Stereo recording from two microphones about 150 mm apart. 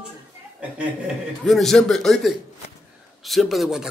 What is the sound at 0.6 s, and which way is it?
A man's voice, 5° right (ahead or behind).